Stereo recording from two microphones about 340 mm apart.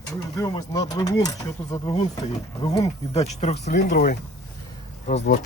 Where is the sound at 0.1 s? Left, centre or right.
Centre.